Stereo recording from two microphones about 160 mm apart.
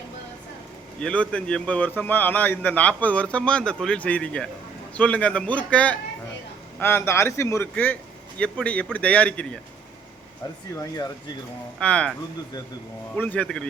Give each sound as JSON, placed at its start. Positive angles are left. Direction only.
{"t": 0.9, "sound": "a man's voice", "side_deg": 5}
{"t": 10.8, "sound": "speech", "side_deg": 20}
{"t": 11.8, "sound": "a man's voice", "side_deg": 5}
{"t": 13.1, "sound": "a man's voice", "side_deg": 10}